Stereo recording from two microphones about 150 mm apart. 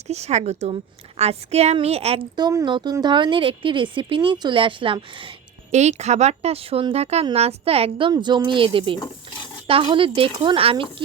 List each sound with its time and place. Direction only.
0.1 s a woman's voice: 50° right (ahead or behind)
2.3 s speech: 25° right (ahead or behind)
5.7 s a woman's voice: 50° right (ahead or behind)